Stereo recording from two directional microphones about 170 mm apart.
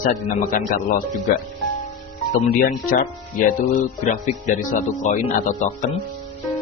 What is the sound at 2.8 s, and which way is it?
Speech, 55° left (ahead or behind).